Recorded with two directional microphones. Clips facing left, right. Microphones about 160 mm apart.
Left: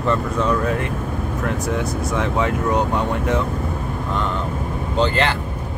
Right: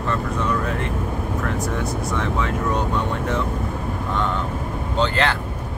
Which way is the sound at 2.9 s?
15° left (ahead or behind).